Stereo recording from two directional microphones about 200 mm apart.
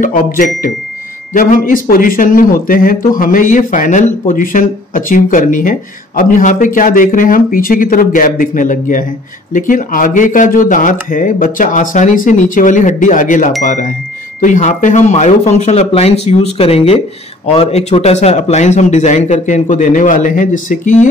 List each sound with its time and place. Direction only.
0.0 s speech: 40° left (ahead or behind)